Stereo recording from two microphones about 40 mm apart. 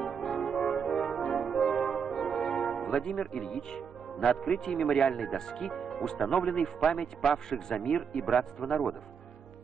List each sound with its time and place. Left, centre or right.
0.0 s brass instrument: centre
3.7 s speech: centre
8.2 s speech: centre